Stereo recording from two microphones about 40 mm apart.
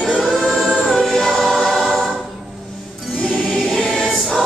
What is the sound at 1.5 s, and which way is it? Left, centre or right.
Choir, centre.